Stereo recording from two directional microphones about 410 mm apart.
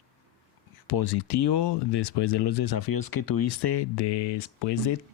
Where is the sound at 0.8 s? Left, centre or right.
Left.